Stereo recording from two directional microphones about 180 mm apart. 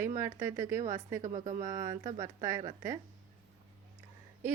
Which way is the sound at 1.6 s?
15° right (ahead or behind).